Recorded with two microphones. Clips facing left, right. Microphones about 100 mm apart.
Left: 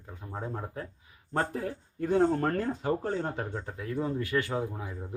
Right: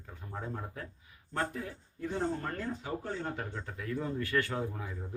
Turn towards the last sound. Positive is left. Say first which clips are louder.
# left 3 dB
turn(degrees=15)  # may be behind; listen again after turning